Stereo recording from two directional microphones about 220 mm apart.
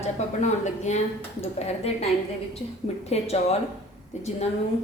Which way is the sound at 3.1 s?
30° left (ahead or behind).